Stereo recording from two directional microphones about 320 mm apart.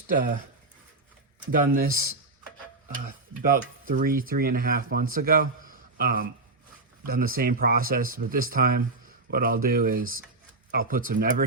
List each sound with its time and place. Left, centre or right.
1.5 s speech: right